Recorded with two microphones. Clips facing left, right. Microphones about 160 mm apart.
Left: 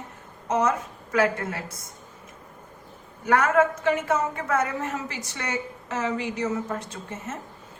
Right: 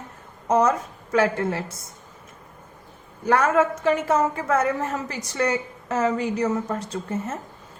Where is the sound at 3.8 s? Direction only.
30° right (ahead or behind).